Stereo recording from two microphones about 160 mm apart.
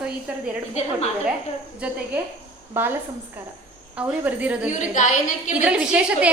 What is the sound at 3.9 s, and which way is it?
Speech, 10° right (ahead or behind).